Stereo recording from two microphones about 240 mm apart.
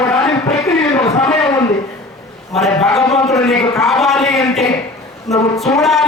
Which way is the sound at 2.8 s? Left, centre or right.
Centre.